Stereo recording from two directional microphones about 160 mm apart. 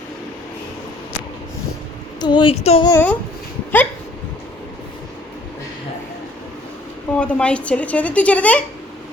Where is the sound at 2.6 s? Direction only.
40° left (ahead or behind).